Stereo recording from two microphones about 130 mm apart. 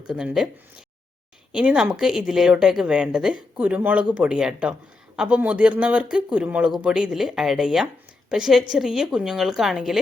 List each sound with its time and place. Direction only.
0.1 s a woman's voice: 5° right (ahead or behind)
1.5 s a woman's voice: 5° right (ahead or behind)